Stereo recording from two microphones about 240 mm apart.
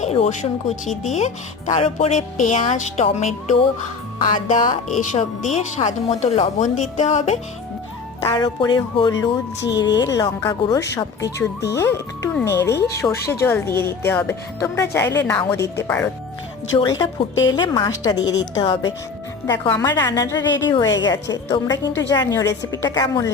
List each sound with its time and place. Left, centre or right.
0.0 s speech: left
4.9 s speech: left
8.2 s speech: centre